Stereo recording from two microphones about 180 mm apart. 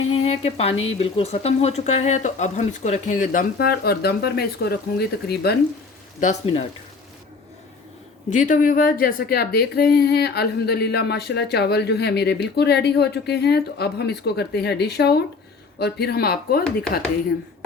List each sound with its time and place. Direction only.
0.1 s speech: 35° left (ahead or behind); by 5.5 s 60° left (ahead or behind)
6.1 s speech: 40° left (ahead or behind)
8.3 s a woman's voice: 45° left (ahead or behind)